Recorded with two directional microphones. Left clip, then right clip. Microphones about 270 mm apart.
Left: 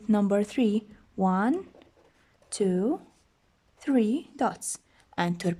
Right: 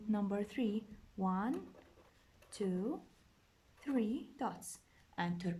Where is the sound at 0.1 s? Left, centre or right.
Left.